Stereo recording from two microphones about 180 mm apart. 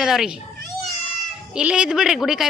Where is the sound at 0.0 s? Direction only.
Centre (ahead or behind).